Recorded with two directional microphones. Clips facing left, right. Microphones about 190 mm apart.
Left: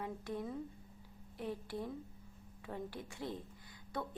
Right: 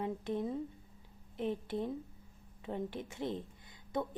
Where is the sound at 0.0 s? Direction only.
20° right (ahead or behind).